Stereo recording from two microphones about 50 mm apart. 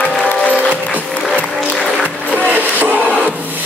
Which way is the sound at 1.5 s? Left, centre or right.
Left.